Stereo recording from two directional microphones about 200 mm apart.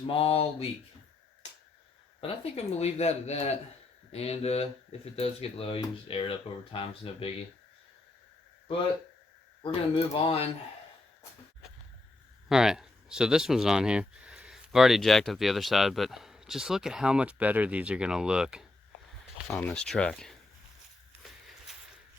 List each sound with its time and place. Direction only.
0.1 s speech: 30° left (ahead or behind)
2.2 s speech: 30° left (ahead or behind)
9.9 s speech: 25° left (ahead or behind)
12.5 s speech: 5° right (ahead or behind)
21.1 s walk: centre (ahead or behind)